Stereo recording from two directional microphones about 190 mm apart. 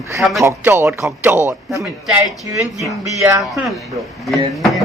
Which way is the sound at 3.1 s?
15° right (ahead or behind).